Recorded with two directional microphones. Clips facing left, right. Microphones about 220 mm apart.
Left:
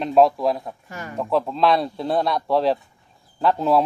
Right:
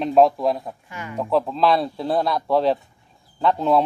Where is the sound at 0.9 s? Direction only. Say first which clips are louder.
Left 1 dB; 40° left (ahead or behind).